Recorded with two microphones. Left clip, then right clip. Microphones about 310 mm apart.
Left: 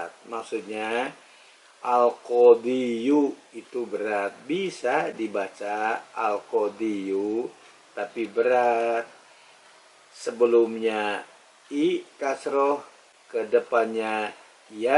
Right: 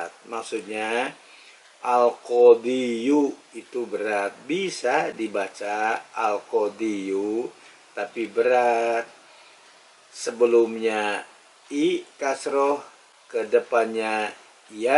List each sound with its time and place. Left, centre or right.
0.0 s speech: centre
2.0 s speech: left
2.6 s speech: centre
3.2 s speech: left
3.9 s speech: centre
8.4 s speech: centre
10.2 s speech: centre